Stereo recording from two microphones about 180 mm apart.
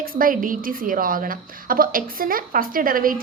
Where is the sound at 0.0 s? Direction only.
50° right (ahead or behind).